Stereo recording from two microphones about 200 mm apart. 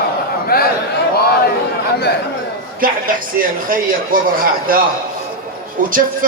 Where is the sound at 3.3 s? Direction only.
45° right (ahead or behind).